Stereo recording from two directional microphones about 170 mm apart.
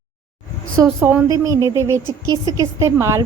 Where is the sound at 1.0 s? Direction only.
15° right (ahead or behind).